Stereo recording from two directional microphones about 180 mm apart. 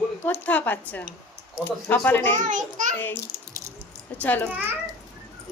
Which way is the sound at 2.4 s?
45° right (ahead or behind).